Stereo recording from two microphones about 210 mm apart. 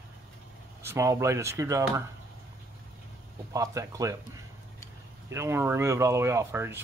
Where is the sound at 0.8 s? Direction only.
10° right (ahead or behind).